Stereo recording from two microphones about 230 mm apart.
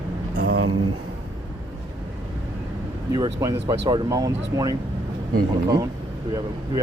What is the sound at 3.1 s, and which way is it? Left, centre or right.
Speech, centre.